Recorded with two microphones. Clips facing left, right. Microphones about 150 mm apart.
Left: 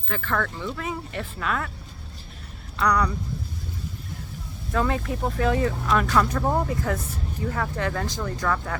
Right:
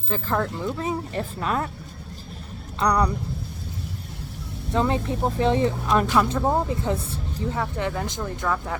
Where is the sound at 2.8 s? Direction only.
30° right (ahead or behind).